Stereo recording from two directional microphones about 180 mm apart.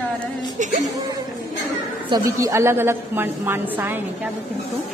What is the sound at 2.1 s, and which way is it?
A man's voice, 20° right (ahead or behind).